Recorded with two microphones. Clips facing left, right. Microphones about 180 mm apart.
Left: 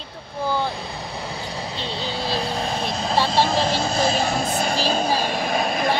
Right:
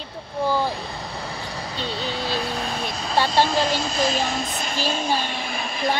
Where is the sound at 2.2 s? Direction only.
30° left (ahead or behind).